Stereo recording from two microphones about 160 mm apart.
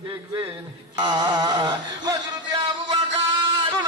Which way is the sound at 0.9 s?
25° right (ahead or behind).